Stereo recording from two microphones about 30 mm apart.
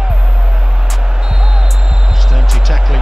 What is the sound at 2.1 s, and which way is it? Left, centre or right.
Music, centre.